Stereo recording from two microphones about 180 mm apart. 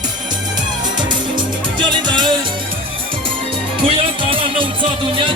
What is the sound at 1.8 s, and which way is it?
Music, 25° right (ahead or behind).